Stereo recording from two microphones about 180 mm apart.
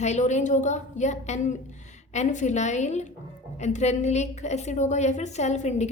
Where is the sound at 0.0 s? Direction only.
40° left (ahead or behind).